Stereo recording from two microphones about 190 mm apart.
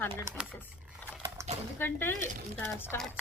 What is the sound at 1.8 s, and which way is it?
A woman's voice, 10° left (ahead or behind).